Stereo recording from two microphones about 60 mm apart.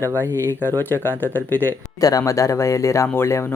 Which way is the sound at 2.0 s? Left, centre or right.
Left.